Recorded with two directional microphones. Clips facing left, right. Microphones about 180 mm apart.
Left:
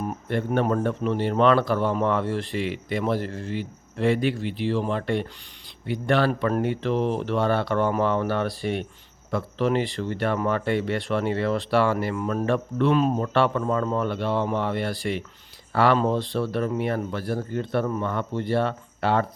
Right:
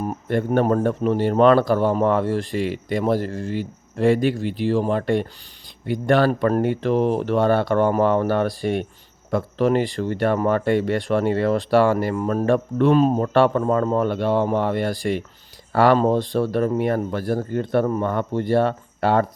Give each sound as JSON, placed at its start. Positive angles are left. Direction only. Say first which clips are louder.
{"t": 0.0, "sound": "speech", "louder": "right 4 dB", "side_deg": -45}